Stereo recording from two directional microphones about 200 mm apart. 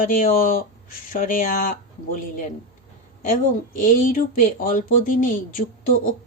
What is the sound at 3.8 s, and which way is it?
Speech, 45° left (ahead or behind).